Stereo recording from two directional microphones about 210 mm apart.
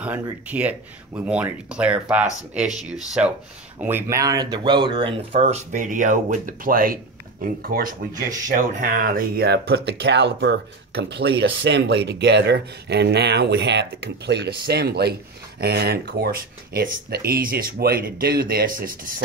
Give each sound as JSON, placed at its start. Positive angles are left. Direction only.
{"t": 0.0, "sound": "speech", "side_deg": -5}